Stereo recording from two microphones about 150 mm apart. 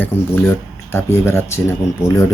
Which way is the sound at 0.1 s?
15° left (ahead or behind).